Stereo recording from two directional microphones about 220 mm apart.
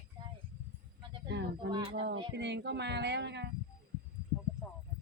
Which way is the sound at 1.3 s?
50° right (ahead or behind).